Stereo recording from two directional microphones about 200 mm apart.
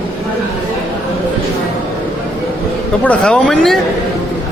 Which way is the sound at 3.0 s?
5° left (ahead or behind).